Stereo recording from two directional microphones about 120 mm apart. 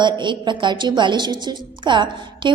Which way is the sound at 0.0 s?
40° right (ahead or behind).